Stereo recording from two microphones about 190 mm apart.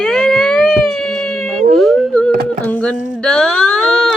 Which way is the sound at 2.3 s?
55° right (ahead or behind).